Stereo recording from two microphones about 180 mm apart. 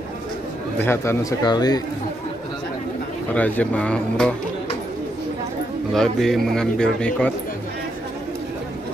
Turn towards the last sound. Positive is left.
turn(degrees=5)  # may be behind; listen again after turning